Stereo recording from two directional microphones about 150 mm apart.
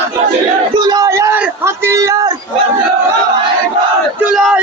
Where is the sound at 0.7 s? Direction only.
25° right (ahead or behind).